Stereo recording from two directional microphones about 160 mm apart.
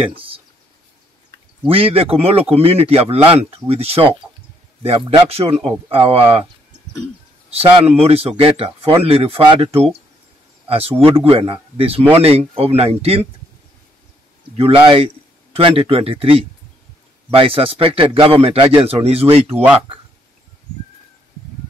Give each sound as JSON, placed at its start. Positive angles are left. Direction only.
{"t": 0.0, "sound": "a man's voice", "side_deg": -35}
{"t": 1.7, "sound": "a man's voice", "side_deg": -35}
{"t": 7.8, "sound": "a man's voice", "side_deg": -40}
{"t": 14.9, "sound": "a man's voice", "side_deg": -35}
{"t": 19.5, "sound": "speech", "side_deg": -10}